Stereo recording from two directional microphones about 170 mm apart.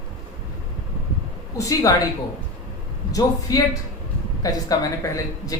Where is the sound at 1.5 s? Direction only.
20° left (ahead or behind).